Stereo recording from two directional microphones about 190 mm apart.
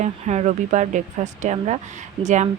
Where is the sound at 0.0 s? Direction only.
40° right (ahead or behind).